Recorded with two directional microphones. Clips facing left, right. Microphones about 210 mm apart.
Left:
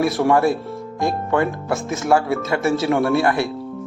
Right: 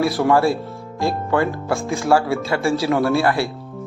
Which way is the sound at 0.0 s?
20° left (ahead or behind).